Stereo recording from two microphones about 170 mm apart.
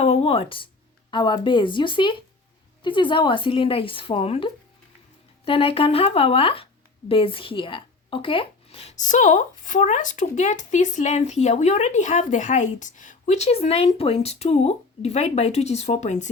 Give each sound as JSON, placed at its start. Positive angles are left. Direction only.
{"t": 0.0, "sound": "speech", "side_deg": 35}